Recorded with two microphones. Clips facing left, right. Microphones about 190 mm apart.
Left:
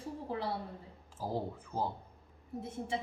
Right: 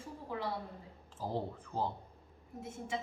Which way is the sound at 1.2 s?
10° left (ahead or behind).